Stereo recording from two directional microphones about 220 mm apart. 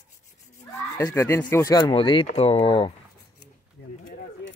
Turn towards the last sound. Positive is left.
turn(degrees=55)  # may be behind; listen again after turning